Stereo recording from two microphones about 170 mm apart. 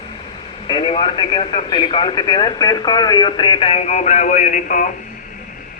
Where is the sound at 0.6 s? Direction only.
30° left (ahead or behind); by 4.9 s 50° left (ahead or behind).